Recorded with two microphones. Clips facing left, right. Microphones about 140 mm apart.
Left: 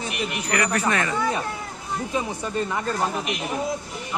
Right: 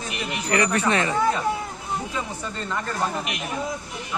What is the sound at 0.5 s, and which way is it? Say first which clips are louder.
Speech: right 2 dB; 30° right (ahead or behind).